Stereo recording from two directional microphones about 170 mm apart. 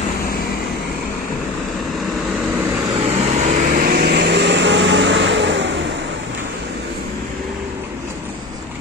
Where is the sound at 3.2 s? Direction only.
40° right (ahead or behind); by 5.7 s 90° right.